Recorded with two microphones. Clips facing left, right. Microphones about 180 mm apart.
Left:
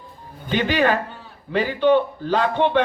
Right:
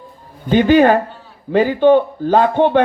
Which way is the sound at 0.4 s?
50° right (ahead or behind).